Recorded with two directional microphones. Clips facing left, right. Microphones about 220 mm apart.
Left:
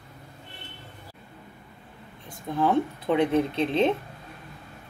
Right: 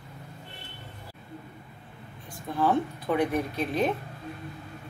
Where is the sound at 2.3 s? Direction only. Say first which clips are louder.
Left 2 dB; 20° left (ahead or behind).